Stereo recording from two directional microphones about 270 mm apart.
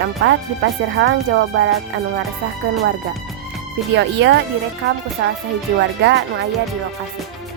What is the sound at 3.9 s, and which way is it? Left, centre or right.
Speech, right.